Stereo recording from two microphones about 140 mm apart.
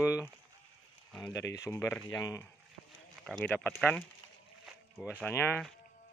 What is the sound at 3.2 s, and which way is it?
Speech, 5° left (ahead or behind).